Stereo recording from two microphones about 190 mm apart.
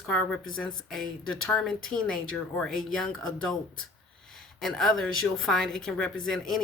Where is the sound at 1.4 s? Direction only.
Centre (ahead or behind).